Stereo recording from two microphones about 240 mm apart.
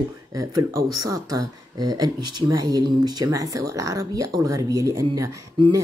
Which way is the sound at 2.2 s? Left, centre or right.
Right.